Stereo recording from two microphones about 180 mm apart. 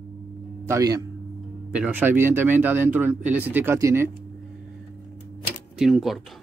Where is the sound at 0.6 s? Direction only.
20° right (ahead or behind).